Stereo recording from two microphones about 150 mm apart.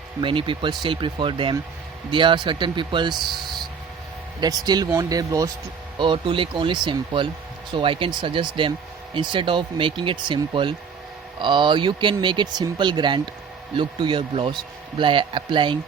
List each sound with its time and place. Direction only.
0.2 s speech: 35° right (ahead or behind)
4.4 s speech: 25° right (ahead or behind)
6.0 s speech: 35° right (ahead or behind)